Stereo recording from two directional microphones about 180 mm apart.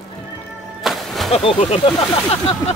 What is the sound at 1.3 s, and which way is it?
Speech, 35° left (ahead or behind).